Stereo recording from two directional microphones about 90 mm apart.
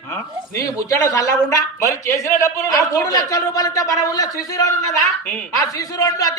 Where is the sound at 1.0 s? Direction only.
35° left (ahead or behind).